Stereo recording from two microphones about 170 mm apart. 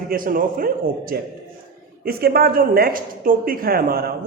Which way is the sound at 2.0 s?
65° right (ahead or behind).